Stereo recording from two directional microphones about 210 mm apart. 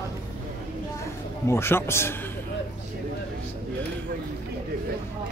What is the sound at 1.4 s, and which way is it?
Speech, 10° left (ahead or behind).